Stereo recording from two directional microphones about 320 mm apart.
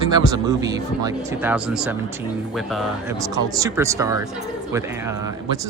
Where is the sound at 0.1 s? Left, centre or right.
Centre.